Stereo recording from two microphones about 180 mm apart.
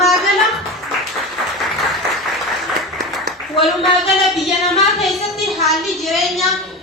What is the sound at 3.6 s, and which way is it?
A woman's voice, centre (ahead or behind).